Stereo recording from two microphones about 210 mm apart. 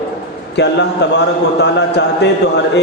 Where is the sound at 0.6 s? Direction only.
55° left (ahead or behind).